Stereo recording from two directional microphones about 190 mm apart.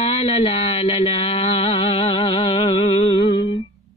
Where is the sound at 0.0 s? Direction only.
30° left (ahead or behind).